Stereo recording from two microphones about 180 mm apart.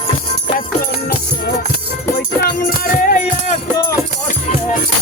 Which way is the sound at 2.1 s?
55° left (ahead or behind).